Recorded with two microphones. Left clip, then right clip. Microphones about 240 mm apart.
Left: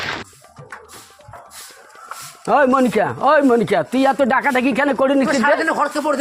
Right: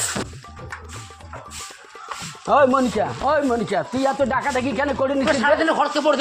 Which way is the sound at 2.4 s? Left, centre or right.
Left.